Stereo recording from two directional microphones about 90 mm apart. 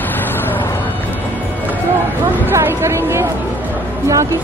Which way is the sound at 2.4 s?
30° right (ahead or behind).